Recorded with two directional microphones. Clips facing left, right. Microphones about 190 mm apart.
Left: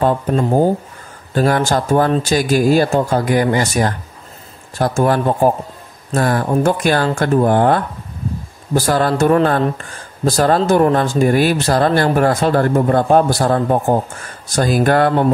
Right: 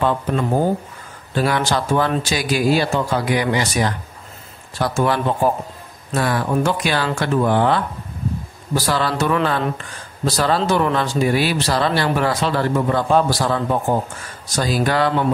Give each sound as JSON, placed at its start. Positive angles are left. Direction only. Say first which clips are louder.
{"t": 0.0, "sound": "speech", "louder": "left 4 dB", "side_deg": 40}